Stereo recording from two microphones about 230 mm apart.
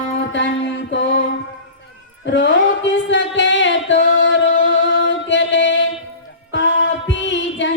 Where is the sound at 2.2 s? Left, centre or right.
Left.